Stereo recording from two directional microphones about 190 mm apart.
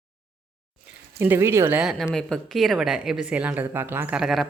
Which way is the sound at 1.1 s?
10° right (ahead or behind).